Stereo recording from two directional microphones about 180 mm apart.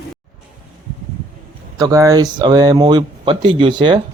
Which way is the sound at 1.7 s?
20° right (ahead or behind).